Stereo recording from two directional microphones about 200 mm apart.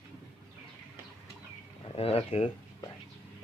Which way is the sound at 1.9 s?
30° left (ahead or behind).